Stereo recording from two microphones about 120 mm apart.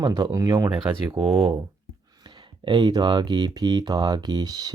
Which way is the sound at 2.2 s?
40° right (ahead or behind).